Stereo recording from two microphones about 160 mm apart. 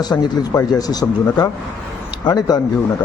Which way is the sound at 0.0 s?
25° left (ahead or behind).